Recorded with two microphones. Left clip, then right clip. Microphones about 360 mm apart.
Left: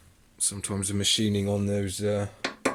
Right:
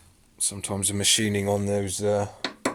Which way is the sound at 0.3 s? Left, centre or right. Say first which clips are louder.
Right 2 dB; centre.